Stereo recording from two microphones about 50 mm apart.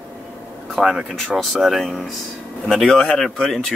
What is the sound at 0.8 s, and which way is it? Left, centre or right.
Speech, centre.